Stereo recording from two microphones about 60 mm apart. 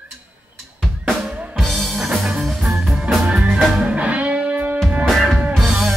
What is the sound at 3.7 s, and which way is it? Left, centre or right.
Music, right.